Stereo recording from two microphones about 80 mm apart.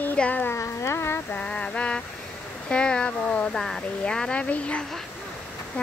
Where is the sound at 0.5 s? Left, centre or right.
Left.